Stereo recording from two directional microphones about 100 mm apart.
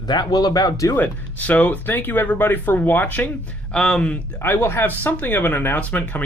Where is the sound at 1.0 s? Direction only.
15° left (ahead or behind).